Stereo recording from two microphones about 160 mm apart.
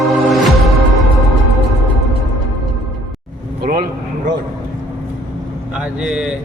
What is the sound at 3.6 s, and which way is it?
Vehicle, 70° right (ahead or behind).